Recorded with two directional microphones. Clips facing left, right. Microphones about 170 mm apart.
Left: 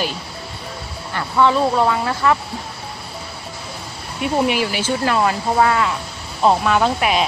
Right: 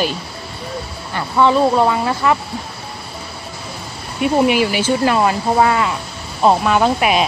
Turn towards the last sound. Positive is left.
turn(degrees=-15)  # may be behind; listen again after turning